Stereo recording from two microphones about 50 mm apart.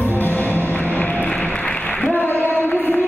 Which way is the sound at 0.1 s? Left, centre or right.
Left.